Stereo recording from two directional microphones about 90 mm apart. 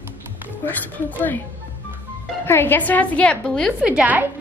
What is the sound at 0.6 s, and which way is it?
Speech, 20° left (ahead or behind).